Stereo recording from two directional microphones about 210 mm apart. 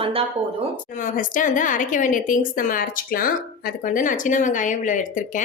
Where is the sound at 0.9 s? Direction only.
40° left (ahead or behind).